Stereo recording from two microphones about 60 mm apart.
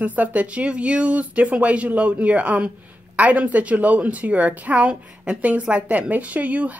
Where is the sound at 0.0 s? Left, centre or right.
Right.